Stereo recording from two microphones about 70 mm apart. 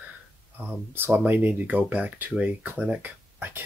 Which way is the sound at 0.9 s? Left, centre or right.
Right.